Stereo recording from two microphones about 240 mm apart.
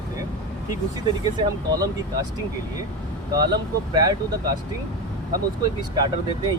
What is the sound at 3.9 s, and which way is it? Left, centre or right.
Speech, centre.